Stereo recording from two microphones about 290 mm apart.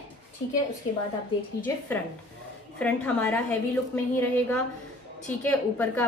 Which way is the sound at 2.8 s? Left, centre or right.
Centre.